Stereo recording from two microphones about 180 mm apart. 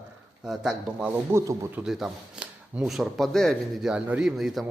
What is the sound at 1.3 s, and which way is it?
Speech, 15° right (ahead or behind).